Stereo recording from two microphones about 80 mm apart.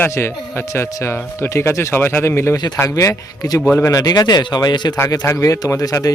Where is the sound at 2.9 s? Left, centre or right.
Left.